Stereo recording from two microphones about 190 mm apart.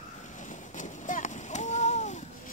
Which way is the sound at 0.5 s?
40° left (ahead or behind).